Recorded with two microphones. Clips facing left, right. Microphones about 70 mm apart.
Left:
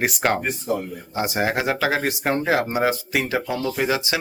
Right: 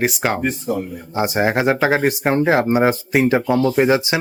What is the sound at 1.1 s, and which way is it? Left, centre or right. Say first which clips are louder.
Speech: right 5 dB; right.